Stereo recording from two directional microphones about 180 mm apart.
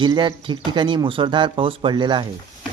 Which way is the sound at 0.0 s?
25° right (ahead or behind).